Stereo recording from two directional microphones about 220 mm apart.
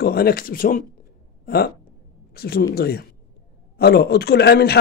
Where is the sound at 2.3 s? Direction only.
45° left (ahead or behind).